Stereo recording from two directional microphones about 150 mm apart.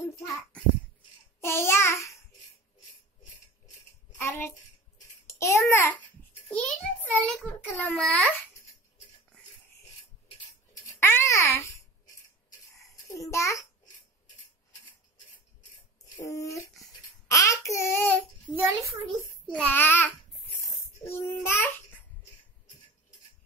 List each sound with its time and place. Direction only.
1.4 s babbling: 15° left (ahead or behind)
4.2 s babbling: 15° left (ahead or behind)
5.2 s a child's voice: 15° left (ahead or behind)
7.8 s babbling: 10° left (ahead or behind)
11.0 s speech: 15° left (ahead or behind)
13.1 s a child's voice: 20° left (ahead or behind)
16.2 s a child's voice: 20° left (ahead or behind)
17.3 s a sound: 20° left (ahead or behind)
18.5 s a child's voice: 15° right (ahead or behind)
19.5 s a child's voice: 10° left (ahead or behind)